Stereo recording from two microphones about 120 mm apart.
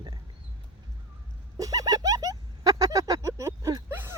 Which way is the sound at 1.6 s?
30° right (ahead or behind).